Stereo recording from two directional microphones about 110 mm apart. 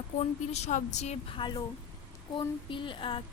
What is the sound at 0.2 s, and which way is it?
A woman's voice, 90° left.